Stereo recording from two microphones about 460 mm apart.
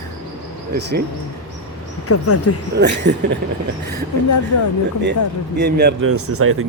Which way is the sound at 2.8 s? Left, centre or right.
Right.